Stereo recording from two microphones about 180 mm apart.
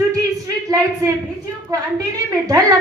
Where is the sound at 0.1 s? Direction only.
20° right (ahead or behind).